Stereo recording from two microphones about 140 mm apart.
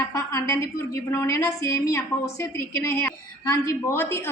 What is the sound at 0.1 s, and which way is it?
A woman's voice, 20° left (ahead or behind).